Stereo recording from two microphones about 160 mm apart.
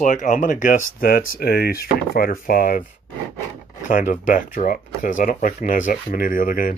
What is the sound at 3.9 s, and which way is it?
Speech, 55° left (ahead or behind).